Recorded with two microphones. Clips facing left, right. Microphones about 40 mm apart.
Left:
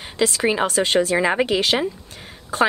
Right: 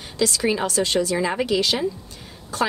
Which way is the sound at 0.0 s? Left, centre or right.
Left.